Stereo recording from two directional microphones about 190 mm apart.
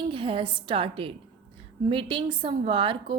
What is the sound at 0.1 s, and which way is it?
A woman's voice, 25° right (ahead or behind).